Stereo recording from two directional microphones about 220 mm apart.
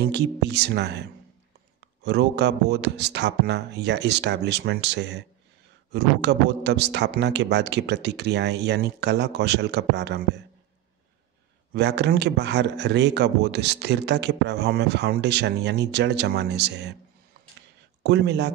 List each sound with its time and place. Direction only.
0.0 s speech: 50° right (ahead or behind)
2.0 s speech: 50° right (ahead or behind)
11.7 s speech: 50° right (ahead or behind)
18.0 s speech: 50° right (ahead or behind)